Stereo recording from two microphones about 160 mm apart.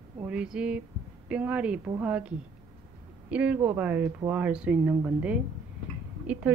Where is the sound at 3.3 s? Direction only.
10° right (ahead or behind).